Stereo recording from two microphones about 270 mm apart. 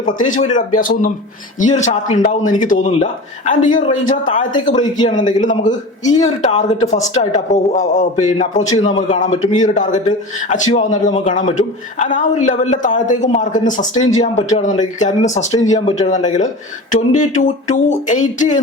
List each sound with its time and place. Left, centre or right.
0.3 s a man's voice: left
5.4 s a man's voice: left